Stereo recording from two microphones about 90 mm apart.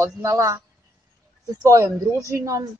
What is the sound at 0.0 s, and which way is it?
Speech, 35° right (ahead or behind).